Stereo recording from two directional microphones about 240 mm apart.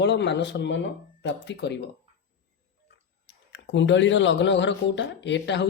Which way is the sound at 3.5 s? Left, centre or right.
Left.